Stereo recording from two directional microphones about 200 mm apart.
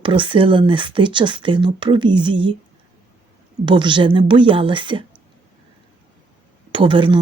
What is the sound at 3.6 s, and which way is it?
Speech, 25° right (ahead or behind).